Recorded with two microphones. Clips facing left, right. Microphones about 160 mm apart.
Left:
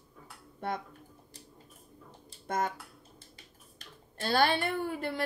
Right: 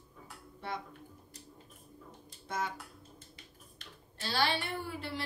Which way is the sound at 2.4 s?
50° left (ahead or behind).